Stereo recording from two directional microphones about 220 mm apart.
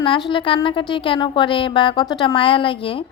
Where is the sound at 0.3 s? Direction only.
25° left (ahead or behind).